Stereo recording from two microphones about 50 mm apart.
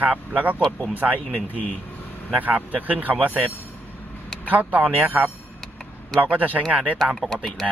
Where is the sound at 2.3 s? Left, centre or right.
Right.